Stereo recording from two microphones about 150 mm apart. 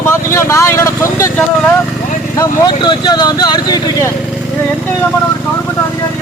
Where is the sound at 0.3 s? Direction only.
20° left (ahead or behind).